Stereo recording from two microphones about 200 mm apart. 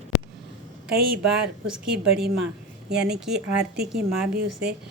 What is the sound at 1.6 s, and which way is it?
Speech, 5° right (ahead or behind).